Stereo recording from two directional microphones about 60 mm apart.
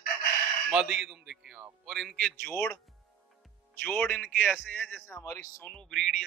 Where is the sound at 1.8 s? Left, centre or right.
Centre.